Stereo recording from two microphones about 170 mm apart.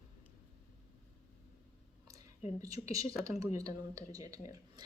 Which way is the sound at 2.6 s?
20° right (ahead or behind).